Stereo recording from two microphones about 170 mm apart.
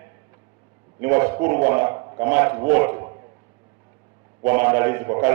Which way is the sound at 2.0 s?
20° right (ahead or behind).